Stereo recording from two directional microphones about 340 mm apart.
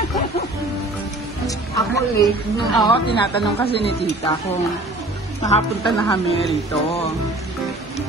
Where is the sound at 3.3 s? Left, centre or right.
Centre.